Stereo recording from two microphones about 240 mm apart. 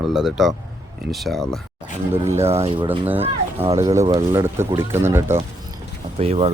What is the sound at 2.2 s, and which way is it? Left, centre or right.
Speech, centre.